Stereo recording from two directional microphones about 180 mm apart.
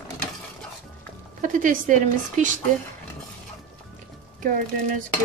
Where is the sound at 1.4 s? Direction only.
45° right (ahead or behind).